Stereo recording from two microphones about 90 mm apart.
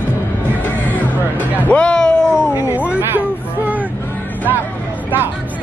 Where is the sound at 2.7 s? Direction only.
15° right (ahead or behind).